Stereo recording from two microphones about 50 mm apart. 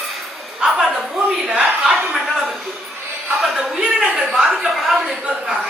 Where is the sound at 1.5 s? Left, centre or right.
Centre.